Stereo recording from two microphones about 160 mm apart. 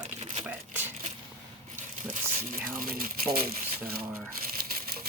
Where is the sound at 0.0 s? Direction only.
45° right (ahead or behind).